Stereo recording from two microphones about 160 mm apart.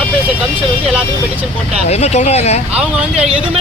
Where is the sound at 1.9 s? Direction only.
45° left (ahead or behind).